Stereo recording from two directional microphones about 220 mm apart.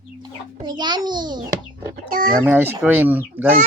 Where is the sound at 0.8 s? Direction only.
20° right (ahead or behind).